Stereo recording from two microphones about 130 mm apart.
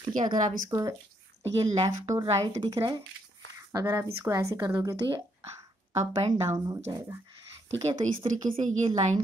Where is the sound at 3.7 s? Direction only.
25° right (ahead or behind).